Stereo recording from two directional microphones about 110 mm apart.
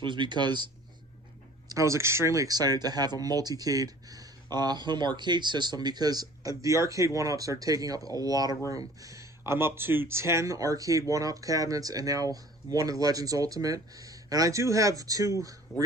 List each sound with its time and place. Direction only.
0.0 s speech: 45° right (ahead or behind)
1.7 s speech: 30° right (ahead or behind)